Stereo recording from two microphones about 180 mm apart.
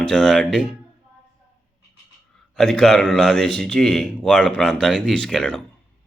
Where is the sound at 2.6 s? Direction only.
Centre (ahead or behind).